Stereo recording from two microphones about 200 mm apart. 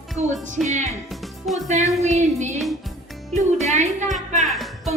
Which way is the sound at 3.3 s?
35° right (ahead or behind).